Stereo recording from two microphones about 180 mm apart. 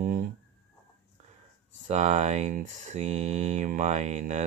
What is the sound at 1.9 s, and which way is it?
Speech, 40° right (ahead or behind).